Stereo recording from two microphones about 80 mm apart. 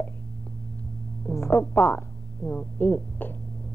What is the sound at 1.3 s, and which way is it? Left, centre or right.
Music, left.